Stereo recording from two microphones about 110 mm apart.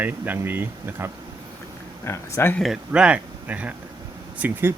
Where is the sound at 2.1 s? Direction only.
20° left (ahead or behind).